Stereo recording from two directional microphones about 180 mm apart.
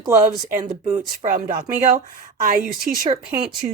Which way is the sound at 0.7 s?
40° right (ahead or behind).